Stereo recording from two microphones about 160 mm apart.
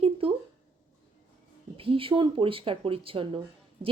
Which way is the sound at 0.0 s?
35° right (ahead or behind).